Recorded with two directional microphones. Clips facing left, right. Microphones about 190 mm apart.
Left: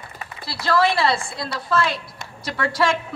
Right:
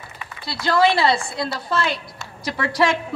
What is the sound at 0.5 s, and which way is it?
A man's voice, centre (ahead or behind).